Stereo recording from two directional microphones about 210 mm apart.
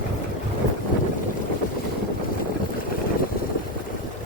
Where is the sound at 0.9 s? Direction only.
40° left (ahead or behind).